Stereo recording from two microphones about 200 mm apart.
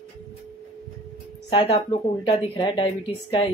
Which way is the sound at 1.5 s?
30° left (ahead or behind).